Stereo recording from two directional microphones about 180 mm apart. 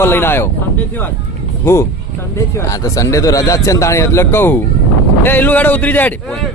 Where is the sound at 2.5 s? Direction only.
15° left (ahead or behind).